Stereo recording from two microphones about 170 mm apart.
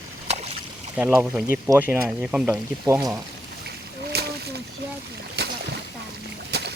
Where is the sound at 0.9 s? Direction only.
10° right (ahead or behind).